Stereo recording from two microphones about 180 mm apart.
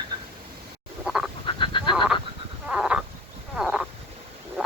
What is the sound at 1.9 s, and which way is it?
Frog, centre (ahead or behind).